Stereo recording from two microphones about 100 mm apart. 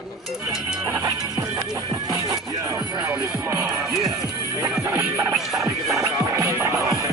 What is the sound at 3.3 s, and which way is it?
Speech, 25° right (ahead or behind).